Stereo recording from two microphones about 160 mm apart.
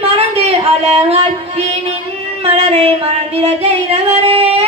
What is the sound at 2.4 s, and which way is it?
Music, 40° right (ahead or behind).